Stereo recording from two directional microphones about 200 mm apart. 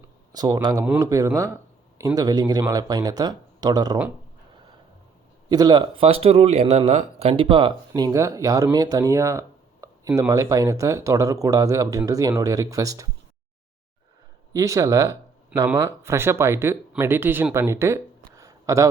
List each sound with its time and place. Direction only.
0.3 s speech: 20° right (ahead or behind)
5.5 s speech: 20° right (ahead or behind)
14.5 s speech: 15° right (ahead or behind)